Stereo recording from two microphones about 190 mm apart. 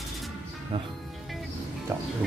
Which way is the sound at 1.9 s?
10° right (ahead or behind).